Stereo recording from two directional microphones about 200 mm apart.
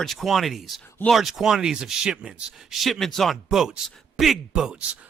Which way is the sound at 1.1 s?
Centre (ahead or behind).